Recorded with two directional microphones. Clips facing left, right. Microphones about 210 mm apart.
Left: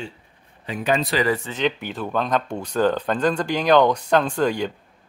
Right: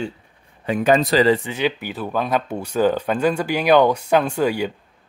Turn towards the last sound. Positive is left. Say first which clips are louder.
# right 1 dB
turn(degrees=-10)  # may be behind; listen again after turning